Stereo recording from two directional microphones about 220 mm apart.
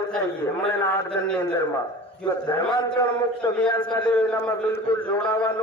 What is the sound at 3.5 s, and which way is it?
A man's voice, 5° left (ahead or behind).